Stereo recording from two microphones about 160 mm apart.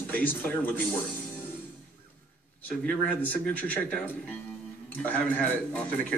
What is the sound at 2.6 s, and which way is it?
Speech, 10° left (ahead or behind).